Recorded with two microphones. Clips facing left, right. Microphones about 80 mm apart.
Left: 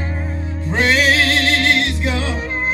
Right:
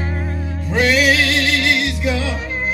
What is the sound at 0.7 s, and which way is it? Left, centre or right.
Music, left.